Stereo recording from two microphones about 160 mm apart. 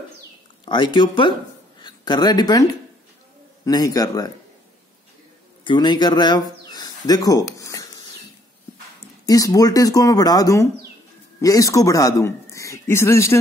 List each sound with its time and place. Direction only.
0.7 s speech: 30° left (ahead or behind)
3.6 s speech: 20° left (ahead or behind)
5.6 s speech: 30° left (ahead or behind)
9.2 s speech: 25° left (ahead or behind)